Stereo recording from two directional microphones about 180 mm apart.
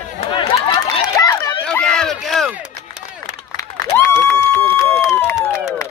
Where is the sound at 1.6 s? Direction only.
5° left (ahead or behind).